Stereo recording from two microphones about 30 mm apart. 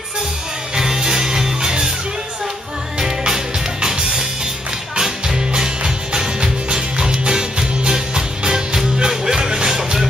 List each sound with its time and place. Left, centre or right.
0.7 s music: centre
3.8 s music: right